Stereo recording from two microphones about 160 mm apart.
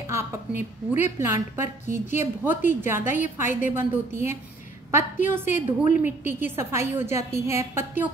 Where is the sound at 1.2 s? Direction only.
15° right (ahead or behind).